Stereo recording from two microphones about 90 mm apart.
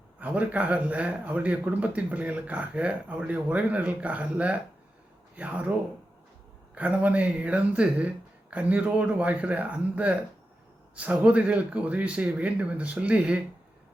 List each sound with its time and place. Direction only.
0.2 s a man's voice: 15° right (ahead or behind)
6.7 s a man's voice: 15° right (ahead or behind)